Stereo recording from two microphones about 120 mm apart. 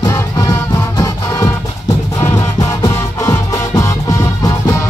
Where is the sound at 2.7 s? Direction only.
25° left (ahead or behind).